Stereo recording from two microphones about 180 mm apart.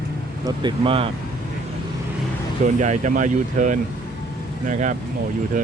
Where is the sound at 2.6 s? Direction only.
45° right (ahead or behind).